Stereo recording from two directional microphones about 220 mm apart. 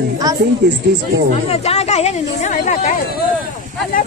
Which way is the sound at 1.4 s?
30° left (ahead or behind).